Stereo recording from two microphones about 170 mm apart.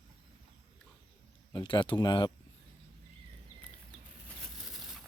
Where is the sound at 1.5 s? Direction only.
30° left (ahead or behind).